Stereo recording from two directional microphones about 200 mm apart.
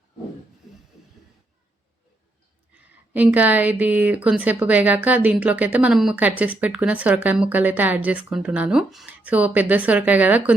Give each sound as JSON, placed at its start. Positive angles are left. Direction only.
{"t": 2.7, "sound": "a woman's voice", "side_deg": -5}